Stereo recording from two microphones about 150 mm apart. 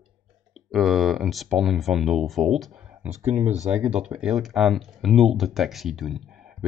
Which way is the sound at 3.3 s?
50° right (ahead or behind).